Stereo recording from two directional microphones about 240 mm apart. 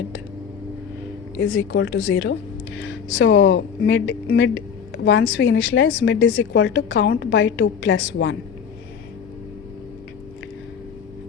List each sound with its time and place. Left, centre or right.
1.4 s a woman's voice: left